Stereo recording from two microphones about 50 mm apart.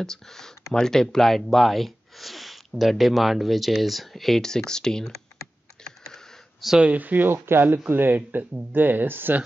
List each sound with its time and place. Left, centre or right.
0.0 s speech: centre
5.9 s computer keyboard: centre
6.8 s speech: right